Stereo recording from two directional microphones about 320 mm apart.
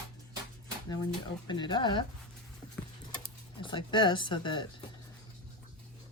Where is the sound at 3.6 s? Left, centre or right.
Centre.